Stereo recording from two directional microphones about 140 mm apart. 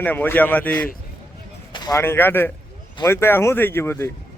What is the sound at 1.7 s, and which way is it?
A man's voice, 25° left (ahead or behind).